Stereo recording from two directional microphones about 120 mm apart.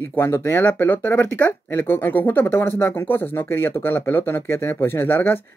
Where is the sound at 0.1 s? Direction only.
20° left (ahead or behind).